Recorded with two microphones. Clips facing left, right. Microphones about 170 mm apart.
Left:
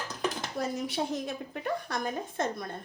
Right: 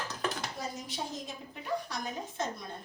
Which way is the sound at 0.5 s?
65° left (ahead or behind).